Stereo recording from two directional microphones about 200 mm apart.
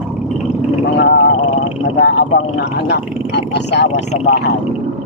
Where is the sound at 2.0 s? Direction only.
55° left (ahead or behind).